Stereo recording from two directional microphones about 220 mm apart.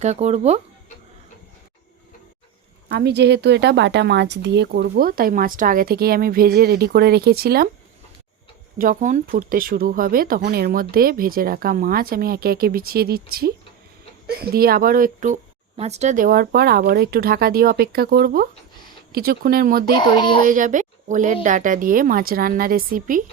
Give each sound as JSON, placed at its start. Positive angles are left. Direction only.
{"t": 0.0, "sound": "speech", "side_deg": -30}
{"t": 2.9, "sound": "speech", "side_deg": -50}
{"t": 8.8, "sound": "speech", "side_deg": -35}
{"t": 19.9, "sound": "speech", "side_deg": 20}
{"t": 20.5, "sound": "speech", "side_deg": -35}